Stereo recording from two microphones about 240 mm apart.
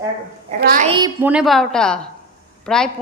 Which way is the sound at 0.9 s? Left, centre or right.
Centre.